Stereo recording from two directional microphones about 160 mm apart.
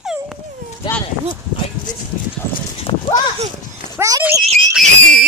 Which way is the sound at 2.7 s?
30° left (ahead or behind).